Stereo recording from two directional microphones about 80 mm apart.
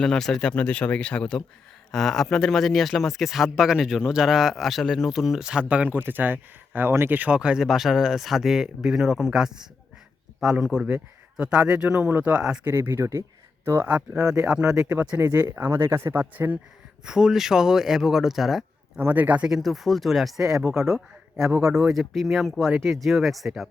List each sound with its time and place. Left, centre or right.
0.0 s a man's voice: centre
12.6 s speech: right
13.8 s a man's voice: centre
17.1 s speech: centre
18.9 s a man's voice: right
19.5 s speech: centre
21.3 s speech: right
21.7 s speech: centre